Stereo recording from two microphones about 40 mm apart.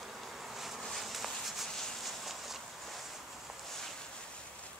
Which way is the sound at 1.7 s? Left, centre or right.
Centre.